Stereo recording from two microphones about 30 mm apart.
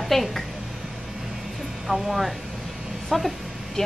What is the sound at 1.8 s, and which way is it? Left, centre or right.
Speech, centre.